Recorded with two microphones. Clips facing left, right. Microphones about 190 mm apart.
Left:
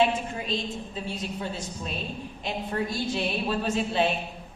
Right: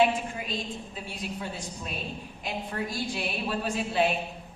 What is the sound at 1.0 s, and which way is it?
A woman's voice, 25° left (ahead or behind).